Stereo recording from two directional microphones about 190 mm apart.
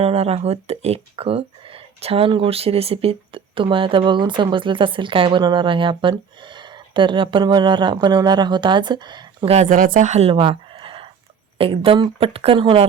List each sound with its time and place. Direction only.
0.0 s speech: 30° right (ahead or behind)
10.3 s a sound: 25° right (ahead or behind)
11.5 s speech: 30° right (ahead or behind)